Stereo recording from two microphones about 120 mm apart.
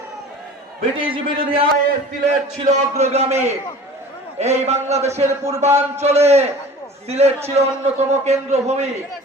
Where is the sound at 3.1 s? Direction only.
65° right (ahead or behind).